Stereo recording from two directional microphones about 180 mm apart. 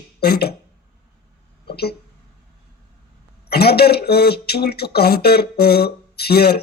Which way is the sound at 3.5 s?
60° left (ahead or behind).